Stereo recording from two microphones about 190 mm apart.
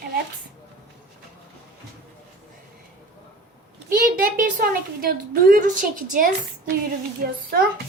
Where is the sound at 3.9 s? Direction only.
45° right (ahead or behind).